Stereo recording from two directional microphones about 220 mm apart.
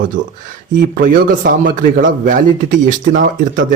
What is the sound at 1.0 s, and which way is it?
A man's voice, 40° right (ahead or behind).